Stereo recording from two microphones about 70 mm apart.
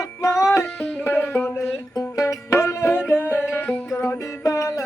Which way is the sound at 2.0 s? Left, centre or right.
Left.